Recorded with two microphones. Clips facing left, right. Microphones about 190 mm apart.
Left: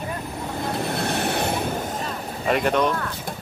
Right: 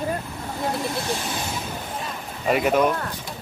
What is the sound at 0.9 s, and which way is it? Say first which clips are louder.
Vehicle: left 4 dB; 60° left (ahead or behind).